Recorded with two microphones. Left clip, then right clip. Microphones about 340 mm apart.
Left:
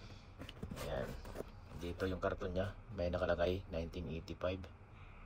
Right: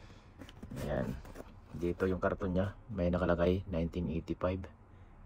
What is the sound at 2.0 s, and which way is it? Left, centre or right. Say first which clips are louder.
Speech: right 4 dB; centre.